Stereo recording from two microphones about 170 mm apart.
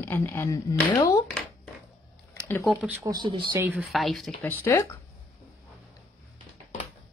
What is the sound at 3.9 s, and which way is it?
Speech, centre (ahead or behind).